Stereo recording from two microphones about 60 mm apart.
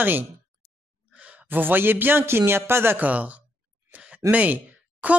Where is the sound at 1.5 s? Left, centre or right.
Right.